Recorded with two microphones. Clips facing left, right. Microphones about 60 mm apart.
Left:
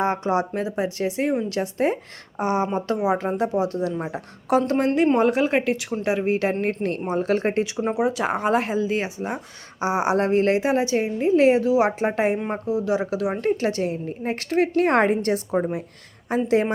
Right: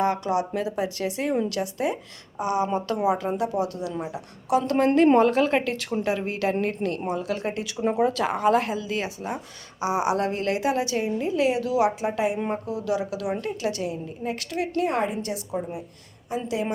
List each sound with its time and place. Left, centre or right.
0.0 s a woman's voice: left
5.1 s a woman's voice: centre
6.1 s a woman's voice: left
7.8 s a woman's voice: centre; by 12.4 s left
12.5 s speech: left
13.4 s a woman's voice: left
14.8 s a woman's voice: left